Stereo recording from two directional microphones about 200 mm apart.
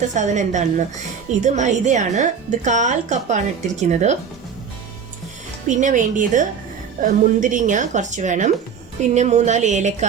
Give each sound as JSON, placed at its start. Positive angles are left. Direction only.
{"t": 0.1, "sound": "speech", "side_deg": -35}
{"t": 5.6, "sound": "speech", "side_deg": -40}